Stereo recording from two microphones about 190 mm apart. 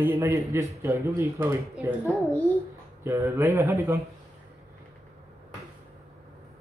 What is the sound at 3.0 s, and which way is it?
Speech, 15° right (ahead or behind).